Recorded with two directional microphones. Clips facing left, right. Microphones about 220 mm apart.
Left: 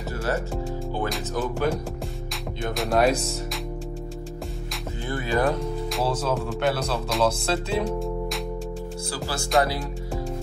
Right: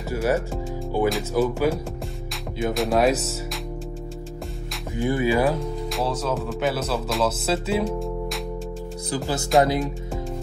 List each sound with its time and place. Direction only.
0.1 s speech: 15° right (ahead or behind)
1.0 s speech: centre (ahead or behind)
4.9 s speech: 15° right (ahead or behind)
5.4 s speech: centre (ahead or behind)
9.1 s speech: 20° right (ahead or behind)